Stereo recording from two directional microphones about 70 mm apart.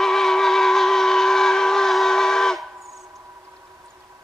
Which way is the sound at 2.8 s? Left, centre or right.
Right.